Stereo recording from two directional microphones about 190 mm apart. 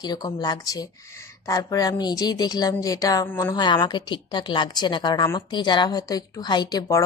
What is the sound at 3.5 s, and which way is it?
A woman's voice, 25° left (ahead or behind).